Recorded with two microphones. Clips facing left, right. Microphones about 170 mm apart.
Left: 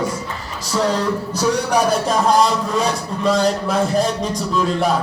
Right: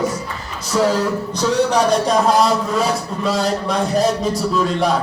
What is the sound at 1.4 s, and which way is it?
A man's voice, 10° left (ahead or behind).